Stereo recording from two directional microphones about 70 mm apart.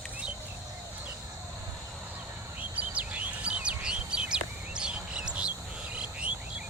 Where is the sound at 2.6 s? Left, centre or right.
Right.